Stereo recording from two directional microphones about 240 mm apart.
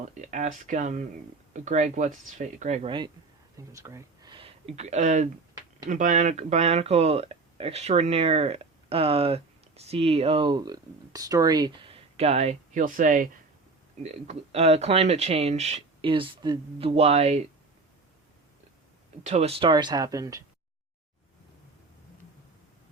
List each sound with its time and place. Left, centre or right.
0.1 s speech: right
19.2 s speech: right